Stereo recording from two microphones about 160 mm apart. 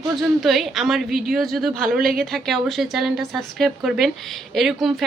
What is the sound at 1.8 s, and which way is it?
Speech, 65° right (ahead or behind).